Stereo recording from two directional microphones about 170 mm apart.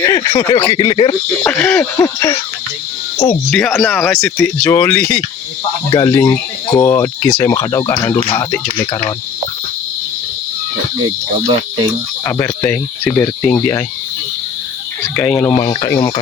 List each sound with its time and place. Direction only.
0.0 s speech: 20° left (ahead or behind)
1.5 s speech: 5° left (ahead or behind)
1.8 s speech: 20° left (ahead or behind)
3.2 s speech: centre (ahead or behind)
5.9 s speech: 20° left (ahead or behind)
12.2 s speech: 15° left (ahead or behind)
15.1 s speech: 10° left (ahead or behind)
15.4 s speech: 25° left (ahead or behind)